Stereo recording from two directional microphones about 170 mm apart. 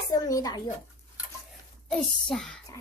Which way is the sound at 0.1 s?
20° left (ahead or behind).